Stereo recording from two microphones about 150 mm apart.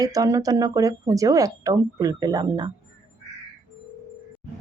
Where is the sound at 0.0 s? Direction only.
25° right (ahead or behind).